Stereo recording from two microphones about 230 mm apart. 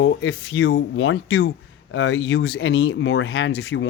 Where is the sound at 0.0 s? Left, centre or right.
Left.